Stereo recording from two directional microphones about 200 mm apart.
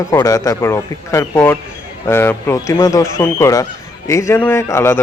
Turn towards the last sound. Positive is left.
turn(degrees=10)  # may be behind; listen again after turning